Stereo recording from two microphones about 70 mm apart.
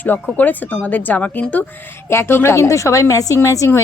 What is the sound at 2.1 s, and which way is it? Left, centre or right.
A woman's voice, left.